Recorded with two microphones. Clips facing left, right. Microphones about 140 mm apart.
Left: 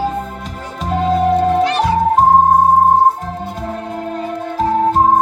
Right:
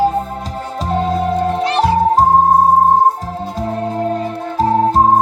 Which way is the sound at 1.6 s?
35° right (ahead or behind).